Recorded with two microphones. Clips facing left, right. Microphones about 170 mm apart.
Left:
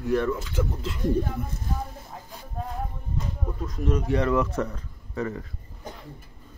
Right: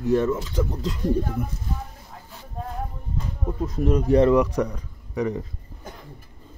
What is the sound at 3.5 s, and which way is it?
Speech, 30° right (ahead or behind).